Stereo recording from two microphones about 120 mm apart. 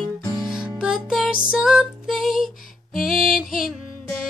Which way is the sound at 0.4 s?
5° right (ahead or behind).